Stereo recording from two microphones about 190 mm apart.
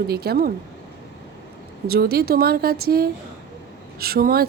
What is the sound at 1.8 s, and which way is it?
Speech, 55° right (ahead or behind).